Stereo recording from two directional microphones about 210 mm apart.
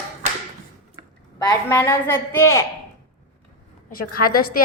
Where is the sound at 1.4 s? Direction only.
15° left (ahead or behind).